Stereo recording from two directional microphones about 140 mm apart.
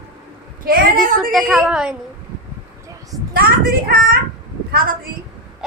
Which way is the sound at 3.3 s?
90° right.